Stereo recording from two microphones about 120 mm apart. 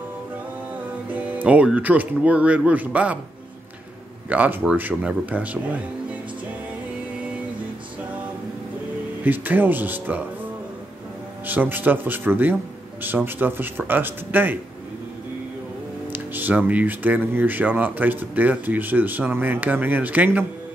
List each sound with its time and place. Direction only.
1.1 s speech: 10° right (ahead or behind)
4.3 s speech: 15° right (ahead or behind)
9.2 s speech: 15° right (ahead or behind)
11.4 s speech: 15° right (ahead or behind)
16.1 s speech: 15° right (ahead or behind)